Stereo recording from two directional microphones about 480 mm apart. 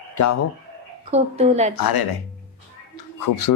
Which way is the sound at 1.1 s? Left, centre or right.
Centre.